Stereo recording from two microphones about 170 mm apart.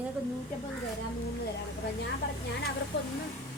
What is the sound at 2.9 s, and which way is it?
Speech, 80° left.